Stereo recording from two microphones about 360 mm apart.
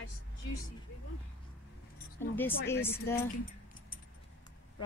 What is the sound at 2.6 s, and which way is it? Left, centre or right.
Speech, centre.